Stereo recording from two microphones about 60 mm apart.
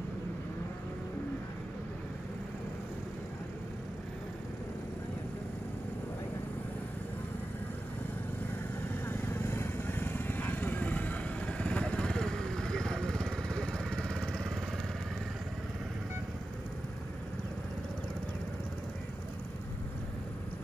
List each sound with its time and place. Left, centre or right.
9.0 s vehicle: left; by 14.5 s centre